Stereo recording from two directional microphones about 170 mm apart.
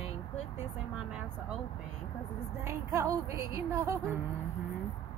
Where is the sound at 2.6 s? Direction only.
15° right (ahead or behind).